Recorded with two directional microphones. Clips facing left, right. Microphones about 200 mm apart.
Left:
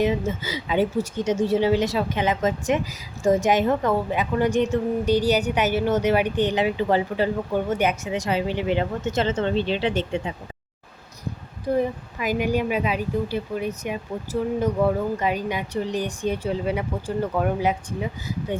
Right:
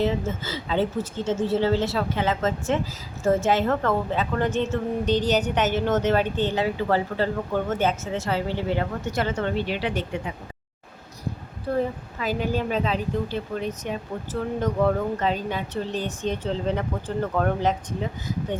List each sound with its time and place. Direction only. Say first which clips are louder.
0.0 s a woman's voice: left 2 dB; 15° left (ahead or behind)
11.6 s a woman's voice: left 2 dB; 15° left (ahead or behind)